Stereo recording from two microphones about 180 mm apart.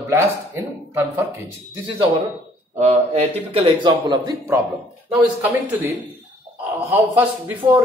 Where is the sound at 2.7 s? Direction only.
35° right (ahead or behind).